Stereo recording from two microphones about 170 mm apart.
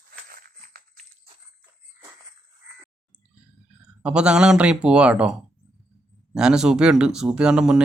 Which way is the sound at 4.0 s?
5° right (ahead or behind).